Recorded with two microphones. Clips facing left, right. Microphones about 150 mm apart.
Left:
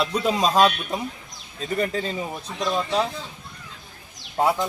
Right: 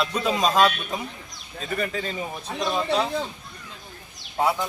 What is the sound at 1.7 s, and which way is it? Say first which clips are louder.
Speech: left 3 dB; 35° left (ahead or behind).